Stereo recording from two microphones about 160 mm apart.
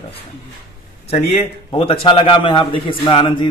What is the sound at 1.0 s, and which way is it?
A man's voice, 35° left (ahead or behind).